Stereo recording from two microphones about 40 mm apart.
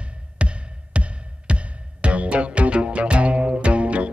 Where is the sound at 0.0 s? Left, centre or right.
Right.